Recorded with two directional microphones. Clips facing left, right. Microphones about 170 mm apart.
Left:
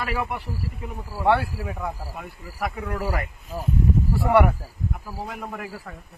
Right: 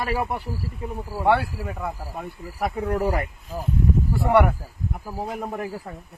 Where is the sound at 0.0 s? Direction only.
25° right (ahead or behind).